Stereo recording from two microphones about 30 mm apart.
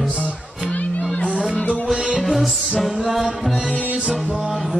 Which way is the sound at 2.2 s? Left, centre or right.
Centre.